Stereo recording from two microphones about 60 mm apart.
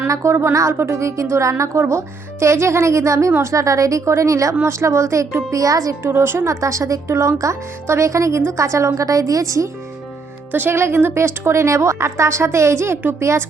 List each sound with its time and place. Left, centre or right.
0.1 s speech: right
0.7 s speech: right
4.6 s speech: right
5.5 s speech: right
6.0 s speech: right
8.4 s speech: right
10.5 s speech: right